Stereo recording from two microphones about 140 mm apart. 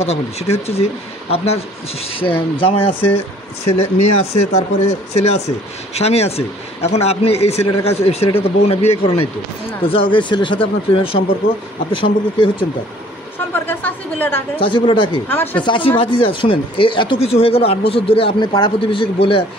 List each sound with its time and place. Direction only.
0.0 s speech: 45° left (ahead or behind)
13.5 s speech: 15° left (ahead or behind)
14.6 s speech: 35° left (ahead or behind)
15.2 s speech: 15° left (ahead or behind)
15.6 s speech: 35° left (ahead or behind)